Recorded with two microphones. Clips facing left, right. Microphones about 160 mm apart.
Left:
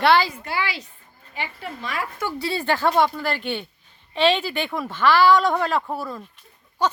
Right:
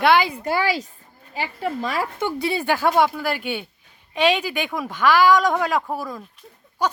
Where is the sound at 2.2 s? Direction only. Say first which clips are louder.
Right 1 dB; 15° right (ahead or behind).